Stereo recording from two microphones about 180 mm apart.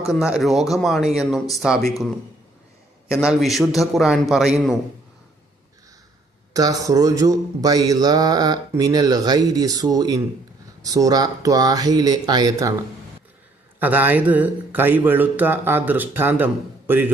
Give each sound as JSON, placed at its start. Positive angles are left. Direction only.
{"t": 0.1, "sound": "speech", "side_deg": 0}
{"t": 3.1, "sound": "speech", "side_deg": -5}
{"t": 6.5, "sound": "speech", "side_deg": -20}
{"t": 13.7, "sound": "a man's voice", "side_deg": -10}